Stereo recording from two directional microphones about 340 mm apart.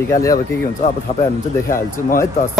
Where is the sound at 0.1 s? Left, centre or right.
Centre.